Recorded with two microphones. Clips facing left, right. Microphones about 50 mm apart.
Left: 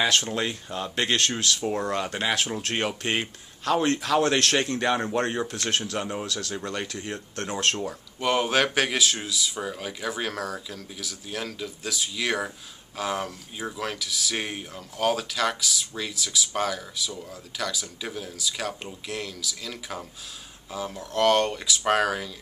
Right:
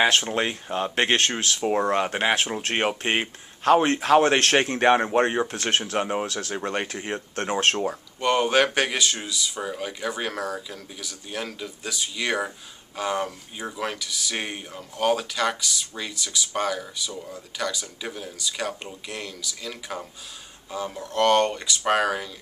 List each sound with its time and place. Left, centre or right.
0.0 s a man's voice: right
8.2 s speech: centre